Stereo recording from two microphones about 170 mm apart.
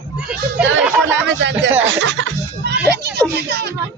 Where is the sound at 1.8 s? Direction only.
90° right; by 3.2 s 75° right (ahead or behind).